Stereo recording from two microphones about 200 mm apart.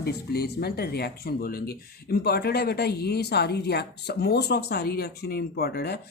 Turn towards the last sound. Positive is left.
turn(degrees=55)  # may be behind; listen again after turning